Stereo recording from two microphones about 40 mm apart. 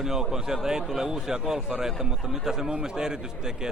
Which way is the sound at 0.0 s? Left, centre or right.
Centre.